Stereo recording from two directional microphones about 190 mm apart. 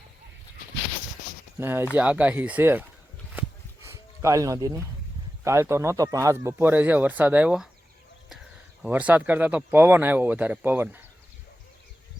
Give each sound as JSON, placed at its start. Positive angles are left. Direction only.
{"t": 1.5, "sound": "speech", "side_deg": -10}
{"t": 3.8, "sound": "speech", "side_deg": -15}